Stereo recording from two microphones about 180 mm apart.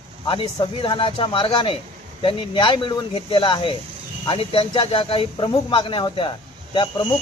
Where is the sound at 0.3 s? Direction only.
30° left (ahead or behind).